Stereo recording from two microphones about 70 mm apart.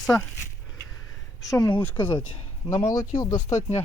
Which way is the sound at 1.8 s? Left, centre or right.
Left.